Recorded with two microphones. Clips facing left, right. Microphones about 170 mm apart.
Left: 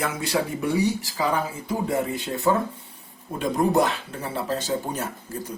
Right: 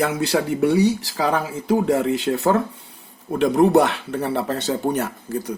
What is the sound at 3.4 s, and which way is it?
Speech, 75° right (ahead or behind).